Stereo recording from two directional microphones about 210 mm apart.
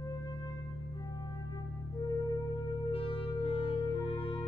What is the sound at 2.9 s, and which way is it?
Music, 25° left (ahead or behind).